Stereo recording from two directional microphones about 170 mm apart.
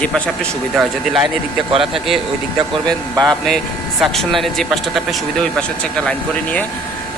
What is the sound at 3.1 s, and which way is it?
Speech, 25° right (ahead or behind).